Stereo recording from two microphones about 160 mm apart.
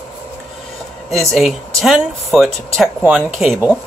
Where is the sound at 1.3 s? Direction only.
Centre (ahead or behind).